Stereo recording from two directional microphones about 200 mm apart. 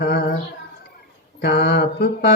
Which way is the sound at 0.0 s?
55° left (ahead or behind).